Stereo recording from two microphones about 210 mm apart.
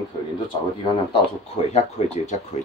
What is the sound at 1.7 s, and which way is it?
Speech, 30° left (ahead or behind).